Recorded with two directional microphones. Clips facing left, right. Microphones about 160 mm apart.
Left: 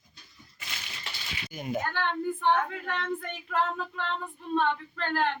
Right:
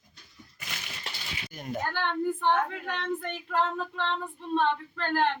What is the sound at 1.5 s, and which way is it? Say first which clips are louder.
Speech: left 2 dB; 5° left (ahead or behind).